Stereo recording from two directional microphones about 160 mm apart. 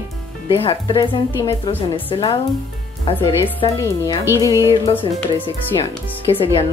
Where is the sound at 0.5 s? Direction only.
30° left (ahead or behind).